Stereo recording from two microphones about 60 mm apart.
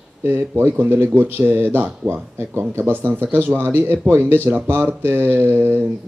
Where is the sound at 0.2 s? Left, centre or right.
Right.